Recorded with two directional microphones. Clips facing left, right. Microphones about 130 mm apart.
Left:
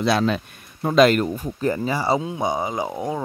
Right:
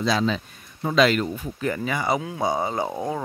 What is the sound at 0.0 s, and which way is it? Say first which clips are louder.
Speech: left 3 dB; 60° left (ahead or behind).